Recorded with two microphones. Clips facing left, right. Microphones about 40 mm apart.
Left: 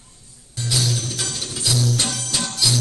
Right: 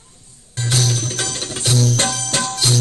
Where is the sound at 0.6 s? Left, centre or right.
Right.